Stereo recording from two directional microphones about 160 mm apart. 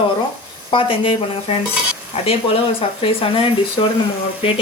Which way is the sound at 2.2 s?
40° left (ahead or behind).